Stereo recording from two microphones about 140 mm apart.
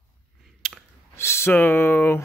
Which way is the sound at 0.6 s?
5° left (ahead or behind).